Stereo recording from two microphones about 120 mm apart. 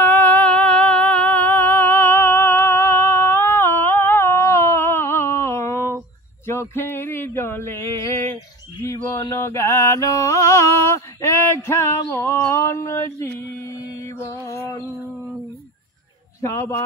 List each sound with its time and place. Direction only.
0.0 s music: 15° left (ahead or behind)
6.7 s chant: 20° left (ahead or behind)
14.2 s mantra: 25° left (ahead or behind)
16.3 s a man's voice: 25° left (ahead or behind)